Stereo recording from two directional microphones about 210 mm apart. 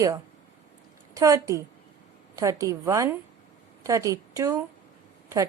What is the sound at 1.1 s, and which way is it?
A woman's voice, 15° right (ahead or behind).